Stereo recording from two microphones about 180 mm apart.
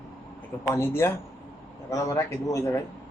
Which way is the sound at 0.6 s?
15° left (ahead or behind).